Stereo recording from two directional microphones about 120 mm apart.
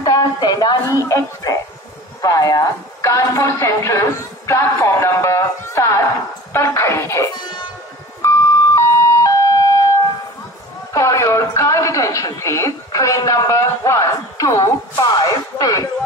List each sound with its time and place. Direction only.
0.0 s a woman's voice: 35° left (ahead or behind)
8.2 s car alarm: 25° left (ahead or behind)
10.9 s a woman's voice: 25° left (ahead or behind)